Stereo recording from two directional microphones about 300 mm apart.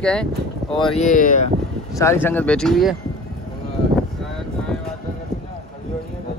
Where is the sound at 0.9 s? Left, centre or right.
Left.